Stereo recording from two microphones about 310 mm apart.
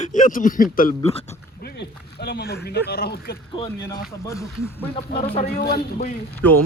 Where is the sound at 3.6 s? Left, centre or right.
Centre.